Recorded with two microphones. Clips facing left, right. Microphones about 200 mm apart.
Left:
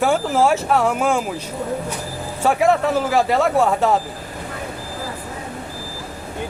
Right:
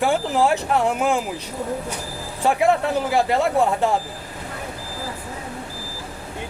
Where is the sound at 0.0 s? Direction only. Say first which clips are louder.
Left 2 dB; 15° right (ahead or behind).